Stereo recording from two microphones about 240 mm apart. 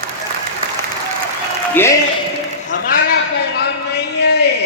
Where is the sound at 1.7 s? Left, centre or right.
Centre.